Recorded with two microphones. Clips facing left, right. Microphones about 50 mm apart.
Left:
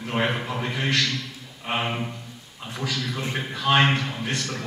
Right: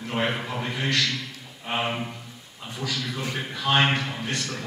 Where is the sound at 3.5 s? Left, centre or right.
Centre.